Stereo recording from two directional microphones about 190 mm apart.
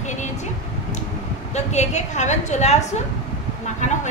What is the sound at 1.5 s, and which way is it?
A woman's voice, 35° left (ahead or behind).